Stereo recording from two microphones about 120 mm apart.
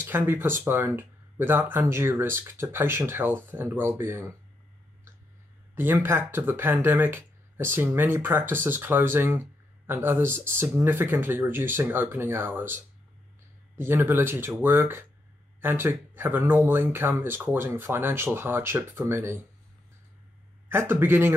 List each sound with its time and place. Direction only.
0.0 s speech: 20° right (ahead or behind)
5.8 s speech: 20° right (ahead or behind)
20.7 s speech: 20° right (ahead or behind)